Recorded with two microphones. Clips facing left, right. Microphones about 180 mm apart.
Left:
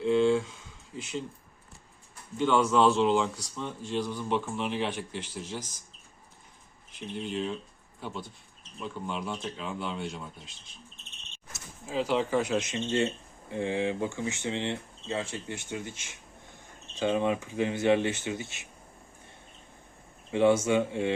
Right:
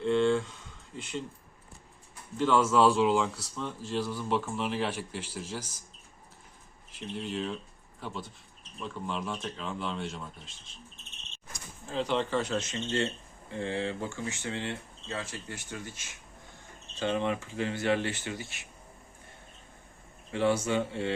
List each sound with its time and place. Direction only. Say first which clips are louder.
0.0 s a sound: left 2 dB; 5° left (ahead or behind)
2.4 s speech: even; 5° right (ahead or behind)
6.9 s speech: left 1 dB; centre (ahead or behind)
11.9 s speech: left 2 dB; 5° left (ahead or behind); by 18.6 s 20° left (ahead or behind)
20.3 s speech: left 4 dB; 20° left (ahead or behind)